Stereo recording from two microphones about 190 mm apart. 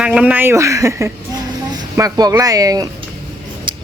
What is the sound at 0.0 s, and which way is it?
Speech, 5° right (ahead or behind).